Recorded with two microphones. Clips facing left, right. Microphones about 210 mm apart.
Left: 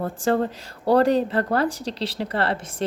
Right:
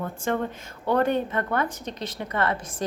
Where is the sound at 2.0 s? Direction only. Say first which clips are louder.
Left 6 dB; 70° left (ahead or behind).